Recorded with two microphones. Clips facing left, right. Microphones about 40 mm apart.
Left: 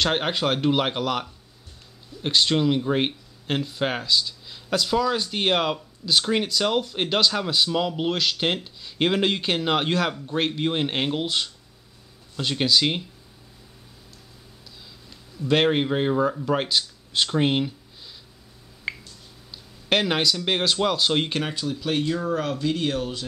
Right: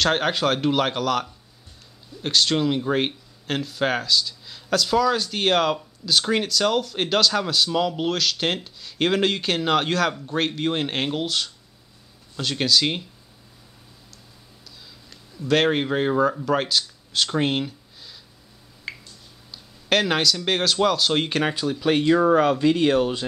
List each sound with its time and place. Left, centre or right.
0.0 s speech: centre
2.2 s speech: centre
2.5 s speech: centre
15.4 s speech: centre
18.9 s a sound: left
19.5 s a sound: centre
20.4 s speech: centre
21.4 s speech: centre